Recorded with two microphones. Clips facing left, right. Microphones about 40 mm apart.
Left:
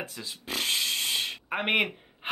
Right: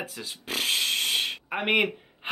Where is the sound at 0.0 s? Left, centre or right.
Centre.